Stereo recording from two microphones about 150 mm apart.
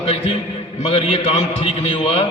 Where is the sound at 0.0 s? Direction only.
40° left (ahead or behind).